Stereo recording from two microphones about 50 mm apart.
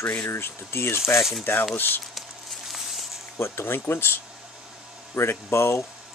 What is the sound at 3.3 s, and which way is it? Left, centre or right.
Speech, left.